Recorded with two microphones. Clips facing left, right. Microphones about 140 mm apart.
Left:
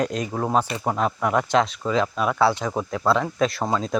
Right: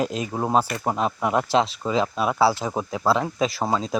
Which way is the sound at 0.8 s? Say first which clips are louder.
Left 1 dB; 20° right (ahead or behind).